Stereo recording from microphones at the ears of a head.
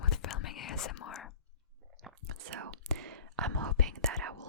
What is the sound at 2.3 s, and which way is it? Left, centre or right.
Whispering, right.